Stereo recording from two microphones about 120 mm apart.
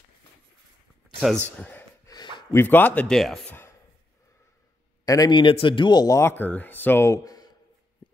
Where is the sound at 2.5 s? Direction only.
15° left (ahead or behind).